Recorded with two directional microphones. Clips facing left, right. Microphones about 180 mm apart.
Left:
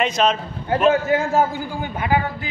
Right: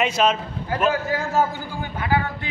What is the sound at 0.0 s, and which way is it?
Speech, 5° right (ahead or behind).